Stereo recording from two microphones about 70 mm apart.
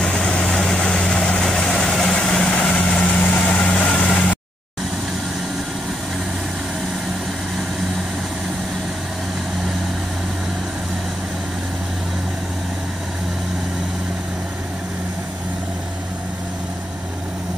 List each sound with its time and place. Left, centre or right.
0.0 s vehicle: centre